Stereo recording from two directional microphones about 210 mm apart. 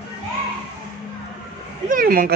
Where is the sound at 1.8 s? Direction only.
45° right (ahead or behind).